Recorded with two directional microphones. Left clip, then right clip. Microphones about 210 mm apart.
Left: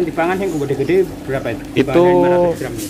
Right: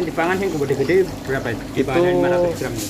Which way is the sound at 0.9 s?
25° left (ahead or behind).